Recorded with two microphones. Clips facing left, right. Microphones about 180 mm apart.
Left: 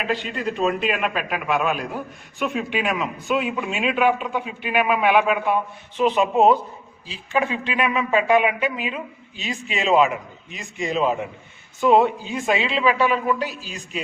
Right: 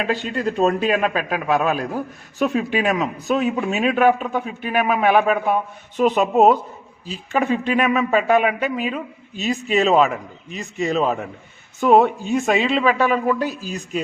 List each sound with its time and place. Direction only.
0.1 s a man's voice: 40° right (ahead or behind)
12.0 s speech: 45° right (ahead or behind)